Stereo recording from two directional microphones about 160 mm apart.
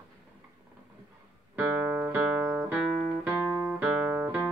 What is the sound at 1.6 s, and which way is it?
Music, 10° right (ahead or behind).